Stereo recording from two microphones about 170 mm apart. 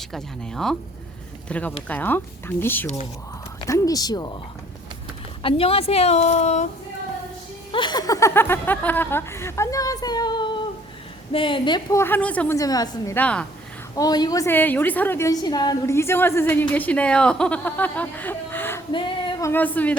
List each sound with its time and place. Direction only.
0.1 s a woman's voice: 5° left (ahead or behind); by 4.4 s 25° left (ahead or behind)
5.4 s a woman's voice: 35° left (ahead or behind)
7.7 s a woman's voice: 25° left (ahead or behind); by 12.5 s 10° left (ahead or behind)
12.5 s speech: 20° left (ahead or behind)
13.1 s a woman's voice: 5° left (ahead or behind)
13.9 s a woman's voice: 20° left (ahead or behind)
18.9 s female singing: 30° left (ahead or behind)
19.4 s a woman's voice: 15° left (ahead or behind)